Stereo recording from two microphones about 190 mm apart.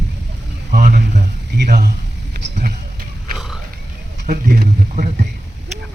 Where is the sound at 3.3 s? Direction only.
Centre (ahead or behind).